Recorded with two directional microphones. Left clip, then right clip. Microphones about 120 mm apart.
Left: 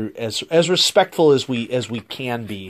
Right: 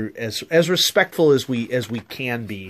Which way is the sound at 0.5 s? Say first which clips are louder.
Left 1 dB; centre (ahead or behind).